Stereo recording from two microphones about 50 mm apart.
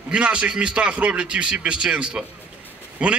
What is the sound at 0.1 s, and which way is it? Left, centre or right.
A man's voice, right.